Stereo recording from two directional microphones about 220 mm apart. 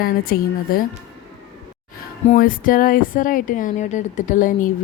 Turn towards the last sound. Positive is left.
turn(degrees=35)  # may be behind; listen again after turning